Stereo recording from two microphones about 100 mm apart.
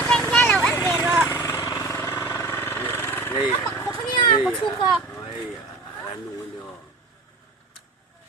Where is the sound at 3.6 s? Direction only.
30° left (ahead or behind).